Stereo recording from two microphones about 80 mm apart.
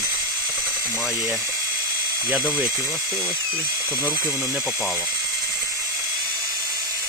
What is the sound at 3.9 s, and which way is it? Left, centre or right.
Speech, right.